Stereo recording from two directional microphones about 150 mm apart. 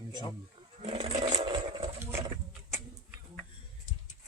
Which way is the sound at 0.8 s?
40° right (ahead or behind).